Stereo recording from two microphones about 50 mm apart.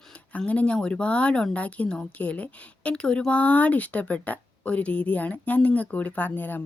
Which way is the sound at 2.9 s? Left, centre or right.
Centre.